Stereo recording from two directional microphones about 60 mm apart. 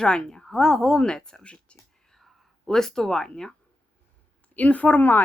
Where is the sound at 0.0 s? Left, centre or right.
Centre.